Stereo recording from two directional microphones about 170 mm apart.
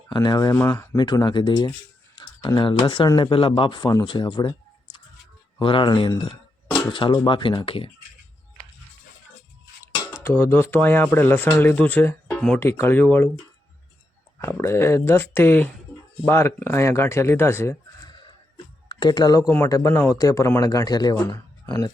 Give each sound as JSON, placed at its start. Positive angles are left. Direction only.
{"t": 0.1, "sound": "speech", "side_deg": 25}
{"t": 5.5, "sound": "speech", "side_deg": 30}
{"t": 9.9, "sound": "speech", "side_deg": 15}
{"t": 14.4, "sound": "speech", "side_deg": 15}
{"t": 18.1, "sound": "speech", "side_deg": 25}